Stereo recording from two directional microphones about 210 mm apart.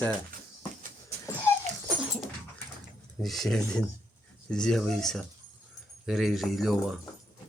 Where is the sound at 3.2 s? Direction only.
Centre (ahead or behind).